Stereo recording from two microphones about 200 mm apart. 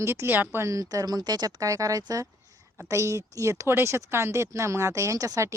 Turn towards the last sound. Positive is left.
turn(degrees=-15)  # may be behind; listen again after turning